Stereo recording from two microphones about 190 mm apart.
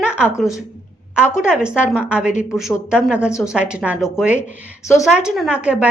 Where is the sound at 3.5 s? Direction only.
5° right (ahead or behind).